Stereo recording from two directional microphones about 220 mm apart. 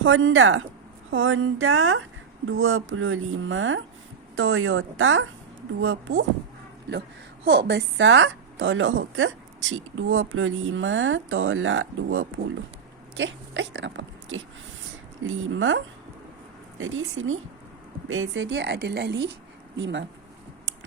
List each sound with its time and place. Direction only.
0.0 s a woman's voice: 60° right (ahead or behind)
7.4 s a woman's voice: 50° right (ahead or behind)
16.8 s a woman's voice: 65° right (ahead or behind)